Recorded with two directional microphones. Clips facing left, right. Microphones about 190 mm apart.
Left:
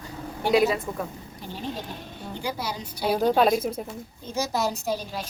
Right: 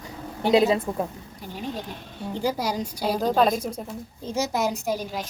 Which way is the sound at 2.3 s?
40° right (ahead or behind).